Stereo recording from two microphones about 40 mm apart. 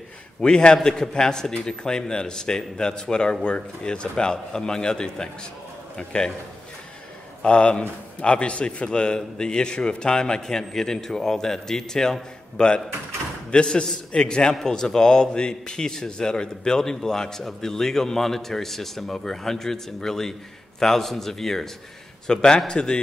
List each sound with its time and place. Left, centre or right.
0.4 s a man's voice: left
7.4 s a man's voice: left